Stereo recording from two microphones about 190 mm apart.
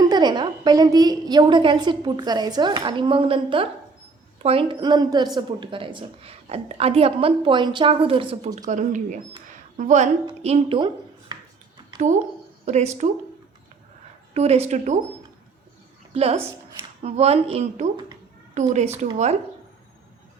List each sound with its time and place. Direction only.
0.0 s a woman's voice: 20° right (ahead or behind); by 10.1 s 40° right (ahead or behind)
10.4 s a sound: 30° right (ahead or behind)
12.6 s a woman's voice: 35° right (ahead or behind)
14.3 s a woman's voice: 35° right (ahead or behind)
16.1 s a woman's voice: 30° right (ahead or behind)